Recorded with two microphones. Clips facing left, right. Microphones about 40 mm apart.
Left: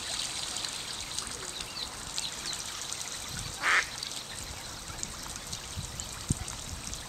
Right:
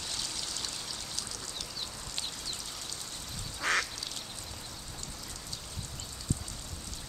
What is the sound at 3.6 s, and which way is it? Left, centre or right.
Duck, centre.